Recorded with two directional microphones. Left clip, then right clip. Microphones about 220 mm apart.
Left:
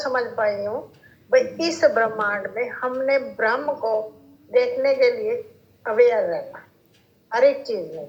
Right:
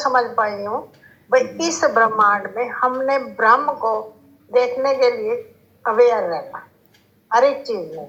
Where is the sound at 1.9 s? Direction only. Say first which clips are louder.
Right 7 dB; 15° right (ahead or behind).